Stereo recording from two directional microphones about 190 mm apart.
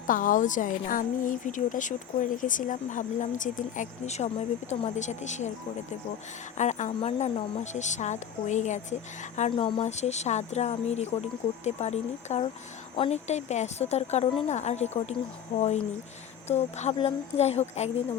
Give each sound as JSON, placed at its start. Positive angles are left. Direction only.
{"t": 0.1, "sound": "a woman's voice", "side_deg": 45}
{"t": 6.6, "sound": "a woman's voice", "side_deg": 40}
{"t": 9.5, "sound": "a woman's voice", "side_deg": 25}